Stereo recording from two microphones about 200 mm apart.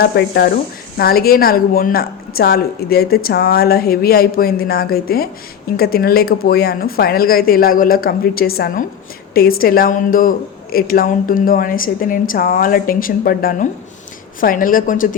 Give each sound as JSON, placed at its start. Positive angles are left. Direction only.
{"t": 0.0, "sound": "speech", "side_deg": 50}